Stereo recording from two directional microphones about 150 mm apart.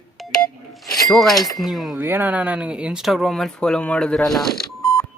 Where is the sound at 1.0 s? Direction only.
Centre (ahead or behind).